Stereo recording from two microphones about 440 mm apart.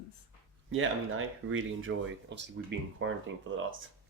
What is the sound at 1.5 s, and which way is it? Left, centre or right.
Speech, right.